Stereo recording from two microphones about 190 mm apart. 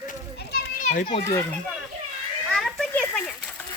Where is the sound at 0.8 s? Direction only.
40° left (ahead or behind).